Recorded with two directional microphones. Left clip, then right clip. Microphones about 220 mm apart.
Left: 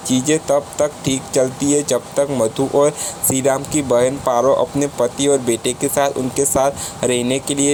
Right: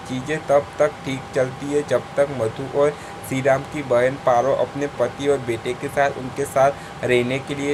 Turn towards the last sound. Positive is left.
turn(degrees=30)  # may be behind; listen again after turning